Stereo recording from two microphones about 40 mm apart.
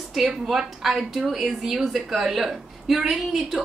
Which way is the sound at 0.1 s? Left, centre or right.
Centre.